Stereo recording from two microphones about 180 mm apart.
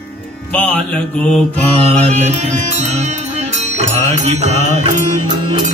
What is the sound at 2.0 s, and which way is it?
Speech, 35° right (ahead or behind).